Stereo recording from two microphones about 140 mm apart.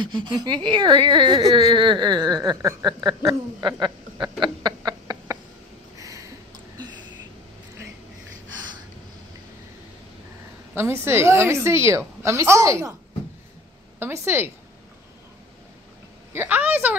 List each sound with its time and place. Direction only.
0.1 s a woman's voice: 35° right (ahead or behind)
3.1 s a sound: 30° right (ahead or behind)
10.7 s a woman's voice: 15° right (ahead or behind)
13.9 s a woman's voice: 15° right (ahead or behind)
16.3 s a woman's voice: 15° right (ahead or behind)